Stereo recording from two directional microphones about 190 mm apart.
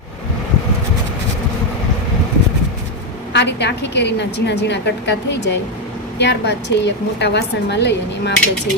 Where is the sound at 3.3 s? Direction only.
65° left (ahead or behind).